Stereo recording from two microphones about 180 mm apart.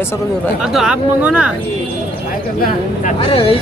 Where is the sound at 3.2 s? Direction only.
30° left (ahead or behind).